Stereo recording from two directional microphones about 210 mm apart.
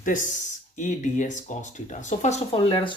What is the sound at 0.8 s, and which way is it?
Speech, 35° left (ahead or behind).